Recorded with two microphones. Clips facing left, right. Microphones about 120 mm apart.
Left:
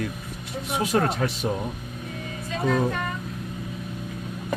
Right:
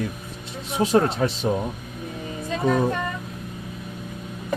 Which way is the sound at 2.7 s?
35° right (ahead or behind).